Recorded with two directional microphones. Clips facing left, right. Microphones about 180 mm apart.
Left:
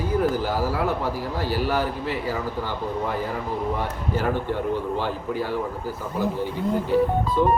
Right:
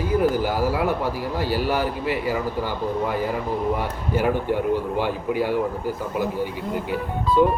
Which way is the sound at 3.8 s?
10° right (ahead or behind).